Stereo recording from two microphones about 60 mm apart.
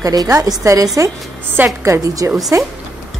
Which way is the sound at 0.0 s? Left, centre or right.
Right.